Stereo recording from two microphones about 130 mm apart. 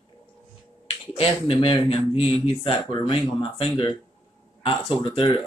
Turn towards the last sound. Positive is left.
turn(degrees=45)  # may be behind; listen again after turning